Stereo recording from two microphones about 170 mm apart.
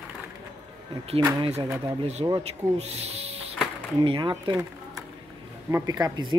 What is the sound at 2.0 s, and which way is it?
Speech, 40° right (ahead or behind).